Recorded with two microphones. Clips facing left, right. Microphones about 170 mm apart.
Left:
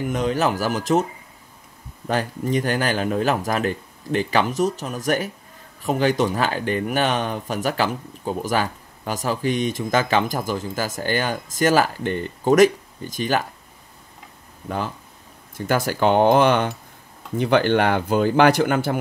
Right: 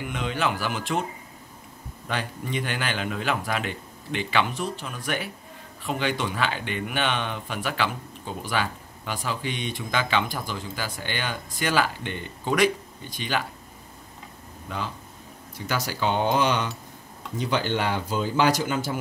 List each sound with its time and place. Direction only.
0.0 s speech: 40° left (ahead or behind)
2.0 s speech: 45° left (ahead or behind)
15.5 s speech: 50° left (ahead or behind)